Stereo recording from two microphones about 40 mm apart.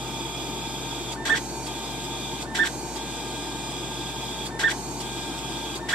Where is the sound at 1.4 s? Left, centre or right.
Right.